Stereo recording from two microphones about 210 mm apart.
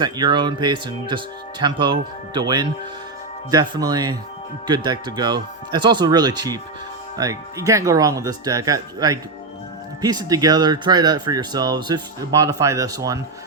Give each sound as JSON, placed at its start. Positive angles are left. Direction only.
{"t": 0.0, "sound": "speech", "side_deg": -20}